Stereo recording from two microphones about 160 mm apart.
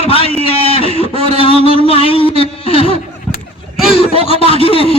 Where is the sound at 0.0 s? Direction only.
35° left (ahead or behind).